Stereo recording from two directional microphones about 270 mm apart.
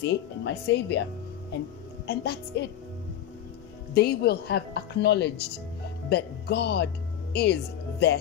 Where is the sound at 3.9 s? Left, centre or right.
Left.